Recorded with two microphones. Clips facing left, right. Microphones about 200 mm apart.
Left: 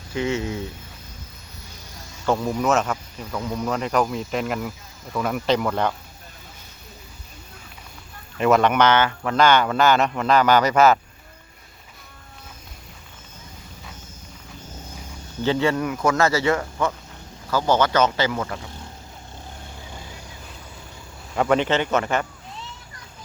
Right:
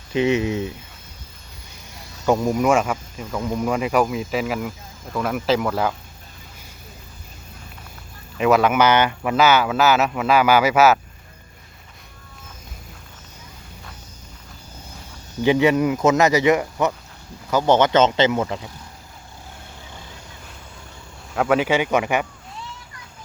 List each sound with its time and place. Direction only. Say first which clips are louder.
0.1 s speech: right 5 dB; 20° right (ahead or behind)
2.2 s speech: right 3 dB; 15° right (ahead or behind)
8.4 s speech: right 1 dB; centre (ahead or behind)
15.4 s speech: right 5 dB; 15° right (ahead or behind)
21.3 s speech: right 1 dB; 5° right (ahead or behind)